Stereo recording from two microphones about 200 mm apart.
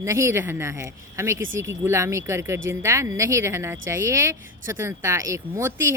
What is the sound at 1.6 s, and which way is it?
Speech, 15° right (ahead or behind).